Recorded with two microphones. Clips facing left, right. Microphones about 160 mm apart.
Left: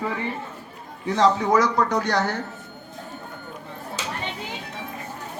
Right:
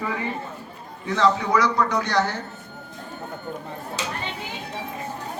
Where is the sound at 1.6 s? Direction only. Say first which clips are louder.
Left 1 dB; 45° left (ahead or behind).